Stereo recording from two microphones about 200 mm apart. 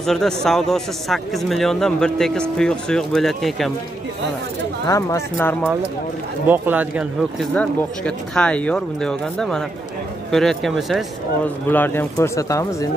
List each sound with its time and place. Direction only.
0.0 s a man's voice: centre (ahead or behind)
4.8 s speech: 15° left (ahead or behind)
6.4 s speech: 10° right (ahead or behind)
7.5 s a man's voice: 5° left (ahead or behind)
11.7 s speech: 10° left (ahead or behind)